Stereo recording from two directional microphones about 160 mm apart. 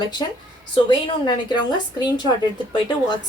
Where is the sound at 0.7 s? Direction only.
30° left (ahead or behind).